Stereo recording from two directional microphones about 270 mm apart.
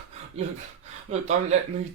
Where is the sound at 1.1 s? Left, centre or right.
Right.